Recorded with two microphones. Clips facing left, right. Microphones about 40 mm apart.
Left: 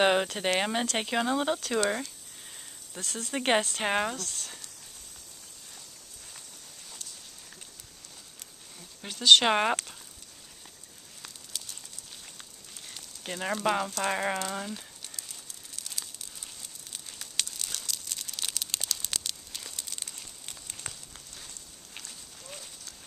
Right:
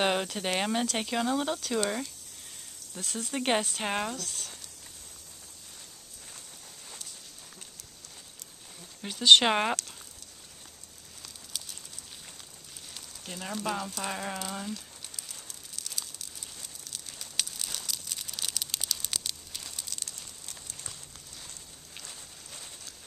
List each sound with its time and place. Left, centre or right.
0.0 s speech: centre
3.0 s speech: centre
3.3 s speech: centre
4.2 s speech: centre
9.0 s speech: centre
13.2 s speech: left
14.5 s speech: centre
15.1 s a sound: centre
17.5 s crumpling: centre
19.9 s crumpling: centre